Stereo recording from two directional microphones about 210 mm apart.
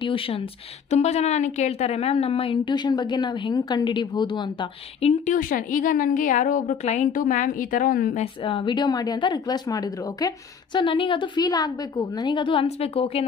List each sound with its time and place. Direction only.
0.0 s speech: 25° left (ahead or behind)
5.2 s a woman's voice: 40° left (ahead or behind)
8.2 s speech: 25° left (ahead or behind)